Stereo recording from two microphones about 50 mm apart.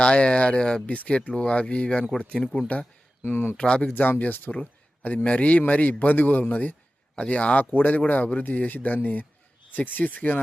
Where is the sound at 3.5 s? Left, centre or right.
Centre.